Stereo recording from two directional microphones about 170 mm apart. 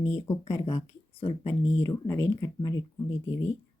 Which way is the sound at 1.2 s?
40° left (ahead or behind).